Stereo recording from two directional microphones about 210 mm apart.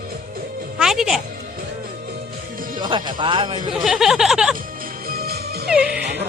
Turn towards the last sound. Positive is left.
turn(degrees=-50)  # may be behind; listen again after turning